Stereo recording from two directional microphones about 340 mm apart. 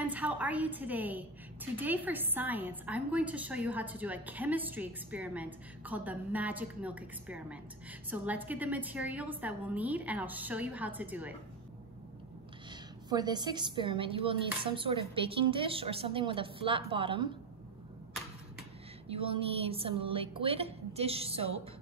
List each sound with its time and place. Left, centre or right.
0.0 s a woman's voice: centre
13.1 s a woman's voice: centre
19.0 s a woman's voice: centre